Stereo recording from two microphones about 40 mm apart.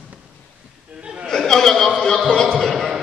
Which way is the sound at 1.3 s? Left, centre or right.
Centre.